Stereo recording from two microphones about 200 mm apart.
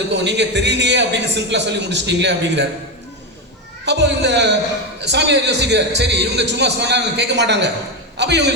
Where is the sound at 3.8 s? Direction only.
60° right (ahead or behind).